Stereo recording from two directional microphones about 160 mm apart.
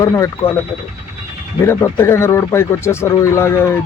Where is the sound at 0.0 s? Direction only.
20° left (ahead or behind).